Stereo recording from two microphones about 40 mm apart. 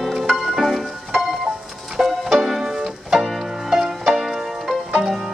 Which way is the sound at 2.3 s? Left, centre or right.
Centre.